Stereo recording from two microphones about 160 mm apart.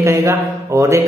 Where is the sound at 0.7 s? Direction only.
20° right (ahead or behind).